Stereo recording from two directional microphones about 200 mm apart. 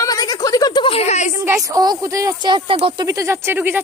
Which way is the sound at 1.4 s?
15° right (ahead or behind).